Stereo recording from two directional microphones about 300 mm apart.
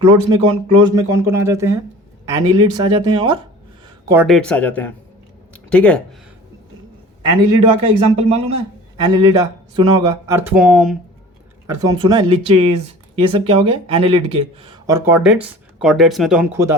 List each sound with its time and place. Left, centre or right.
0.0 s speech: centre
4.1 s speech: centre
7.2 s speech: centre